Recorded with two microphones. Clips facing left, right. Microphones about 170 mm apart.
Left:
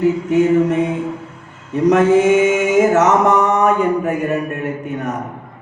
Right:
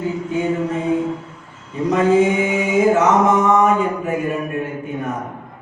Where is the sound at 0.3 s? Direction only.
80° left.